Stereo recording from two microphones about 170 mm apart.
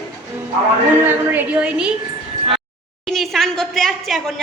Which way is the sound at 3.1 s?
Centre (ahead or behind).